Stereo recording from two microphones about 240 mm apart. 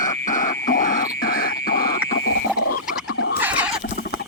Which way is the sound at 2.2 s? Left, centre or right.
Left.